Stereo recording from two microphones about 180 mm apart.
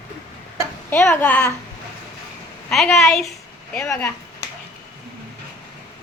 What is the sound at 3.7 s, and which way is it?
Speech, 15° left (ahead or behind).